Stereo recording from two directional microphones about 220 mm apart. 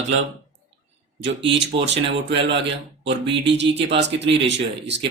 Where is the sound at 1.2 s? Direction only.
55° right (ahead or behind).